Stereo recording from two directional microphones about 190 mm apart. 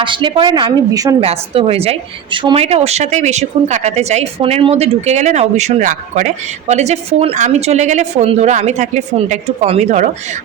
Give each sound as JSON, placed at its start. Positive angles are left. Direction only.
{"t": 0.0, "sound": "a woman's voice", "side_deg": -25}